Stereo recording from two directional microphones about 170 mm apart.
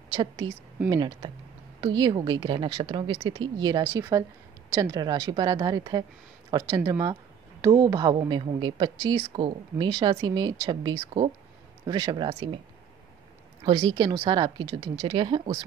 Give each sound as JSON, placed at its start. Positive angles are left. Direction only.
{"t": 0.1, "sound": "speech", "side_deg": -30}
{"t": 13.7, "sound": "speech", "side_deg": -25}